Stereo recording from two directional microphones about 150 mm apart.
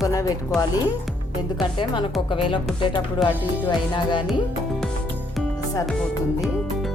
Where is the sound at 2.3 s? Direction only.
35° left (ahead or behind).